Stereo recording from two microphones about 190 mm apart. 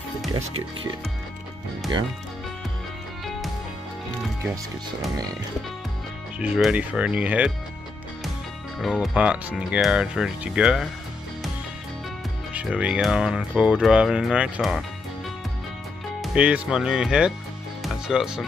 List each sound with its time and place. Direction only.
3.3 s music: centre (ahead or behind)
6.4 s speech: 5° right (ahead or behind)
8.7 s speech: centre (ahead or behind)
12.5 s speech: 5° right (ahead or behind)
16.2 s speech: 5° right (ahead or behind)